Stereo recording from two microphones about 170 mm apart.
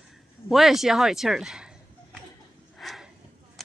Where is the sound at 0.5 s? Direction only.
Centre (ahead or behind).